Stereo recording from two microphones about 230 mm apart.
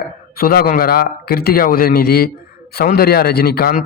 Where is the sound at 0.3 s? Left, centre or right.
Left.